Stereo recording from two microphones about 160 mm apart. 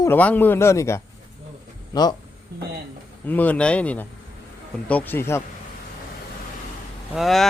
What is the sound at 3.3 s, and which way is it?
Speech, 10° left (ahead or behind).